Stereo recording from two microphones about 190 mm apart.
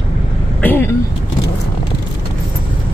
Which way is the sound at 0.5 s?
10° left (ahead or behind).